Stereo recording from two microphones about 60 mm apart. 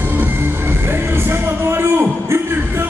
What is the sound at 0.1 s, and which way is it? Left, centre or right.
Music, right.